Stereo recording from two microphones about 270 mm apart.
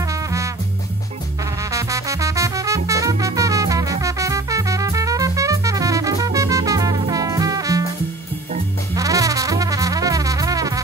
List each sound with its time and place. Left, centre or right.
0.1 s music: centre
1.6 s music: centre
8.9 s music: centre